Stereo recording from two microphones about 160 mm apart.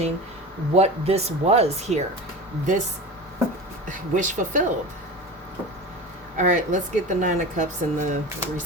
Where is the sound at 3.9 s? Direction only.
55° right (ahead or behind).